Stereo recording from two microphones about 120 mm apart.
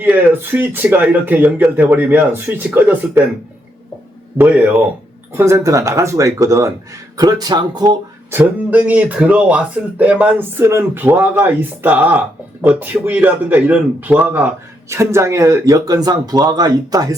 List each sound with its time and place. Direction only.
0.0 s speech: 15° right (ahead or behind)
4.4 s speech: 15° right (ahead or behind); by 7.9 s 35° right (ahead or behind)
8.3 s speech: 15° right (ahead or behind); by 17.2 s 30° right (ahead or behind)